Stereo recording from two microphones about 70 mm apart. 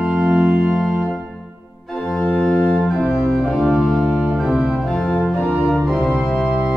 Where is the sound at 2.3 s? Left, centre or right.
Centre.